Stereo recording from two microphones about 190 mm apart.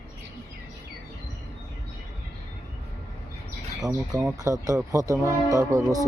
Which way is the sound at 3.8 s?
20° right (ahead or behind).